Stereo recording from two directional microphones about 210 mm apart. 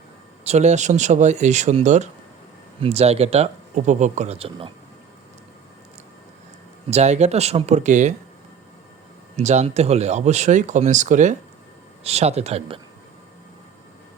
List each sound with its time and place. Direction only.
0.4 s speech: 30° right (ahead or behind)
6.9 s speech: 30° right (ahead or behind)
9.3 s speech: 35° right (ahead or behind)